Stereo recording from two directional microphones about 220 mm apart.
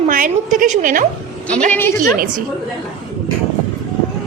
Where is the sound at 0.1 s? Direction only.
40° right (ahead or behind).